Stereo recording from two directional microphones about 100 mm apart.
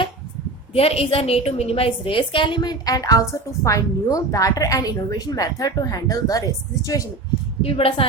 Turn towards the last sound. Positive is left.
turn(degrees=70)  # may be behind; listen again after turning